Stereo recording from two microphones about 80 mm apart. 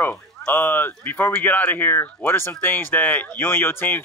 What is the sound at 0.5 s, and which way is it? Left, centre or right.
Speech, left.